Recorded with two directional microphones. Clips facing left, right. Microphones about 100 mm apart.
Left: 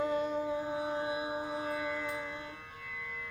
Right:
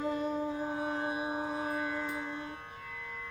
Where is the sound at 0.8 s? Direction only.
45° right (ahead or behind).